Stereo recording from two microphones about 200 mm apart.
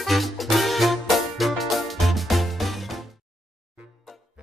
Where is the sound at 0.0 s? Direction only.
Centre (ahead or behind).